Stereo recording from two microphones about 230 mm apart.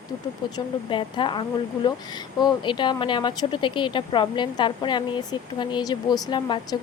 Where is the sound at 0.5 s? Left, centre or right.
Left.